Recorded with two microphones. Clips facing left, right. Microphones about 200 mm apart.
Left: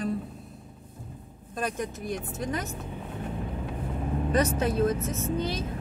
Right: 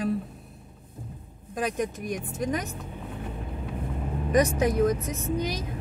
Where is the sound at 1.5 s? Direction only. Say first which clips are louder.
Right 3 dB; 15° right (ahead or behind).